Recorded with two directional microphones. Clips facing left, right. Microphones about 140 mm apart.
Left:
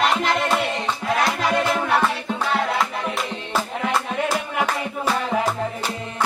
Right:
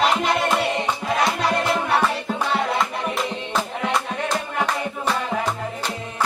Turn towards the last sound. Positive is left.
turn(degrees=5)  # may be behind; listen again after turning